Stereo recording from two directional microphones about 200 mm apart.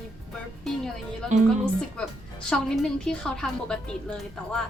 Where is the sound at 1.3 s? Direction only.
35° right (ahead or behind).